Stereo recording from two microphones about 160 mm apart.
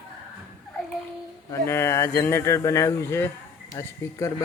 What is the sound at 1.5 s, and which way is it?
A man's voice, 15° left (ahead or behind).